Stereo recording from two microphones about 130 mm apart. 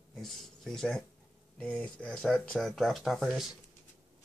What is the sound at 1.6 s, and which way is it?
Speech, 10° left (ahead or behind).